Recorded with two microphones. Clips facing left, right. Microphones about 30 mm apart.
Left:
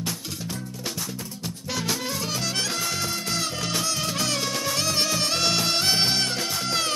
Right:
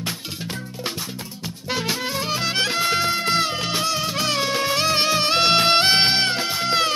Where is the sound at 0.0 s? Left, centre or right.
Right.